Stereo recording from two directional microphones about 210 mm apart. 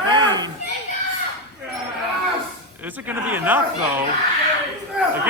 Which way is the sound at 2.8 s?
10° right (ahead or behind).